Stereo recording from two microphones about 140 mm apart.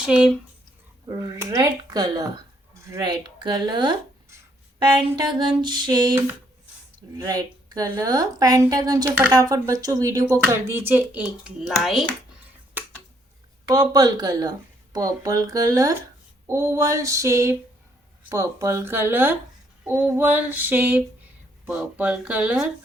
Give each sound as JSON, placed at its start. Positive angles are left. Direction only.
{"t": 0.0, "sound": "a child's voice", "side_deg": -5}
{"t": 1.0, "sound": "speech", "side_deg": -25}
{"t": 5.1, "sound": "speech", "side_deg": -35}
{"t": 7.3, "sound": "a child's voice", "side_deg": -30}
{"t": 12.8, "sound": "a sound", "side_deg": -15}
{"t": 13.7, "sound": "a child's voice", "side_deg": -25}